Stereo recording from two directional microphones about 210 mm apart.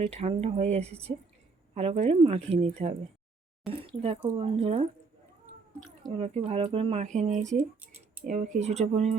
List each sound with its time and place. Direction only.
0.0 s speech: 30° right (ahead or behind)
6.1 s speech: 30° right (ahead or behind)